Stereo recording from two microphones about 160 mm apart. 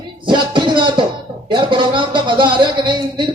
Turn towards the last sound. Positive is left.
turn(degrees=-30)  # may be behind; listen again after turning